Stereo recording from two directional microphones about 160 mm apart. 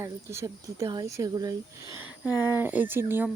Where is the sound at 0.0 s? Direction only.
15° right (ahead or behind).